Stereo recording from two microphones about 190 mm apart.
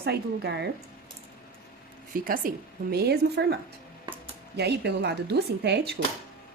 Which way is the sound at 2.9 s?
60° right (ahead or behind).